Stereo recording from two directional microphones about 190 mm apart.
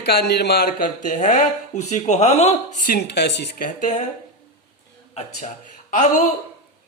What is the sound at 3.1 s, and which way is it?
Speech, 65° left (ahead or behind).